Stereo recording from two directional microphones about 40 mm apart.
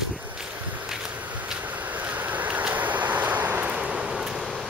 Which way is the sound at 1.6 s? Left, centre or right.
Right.